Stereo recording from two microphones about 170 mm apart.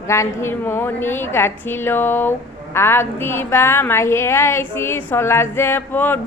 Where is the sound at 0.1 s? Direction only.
15° left (ahead or behind).